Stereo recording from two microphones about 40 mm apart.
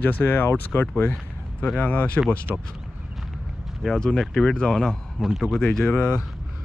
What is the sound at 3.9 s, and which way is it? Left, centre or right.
Speech, centre.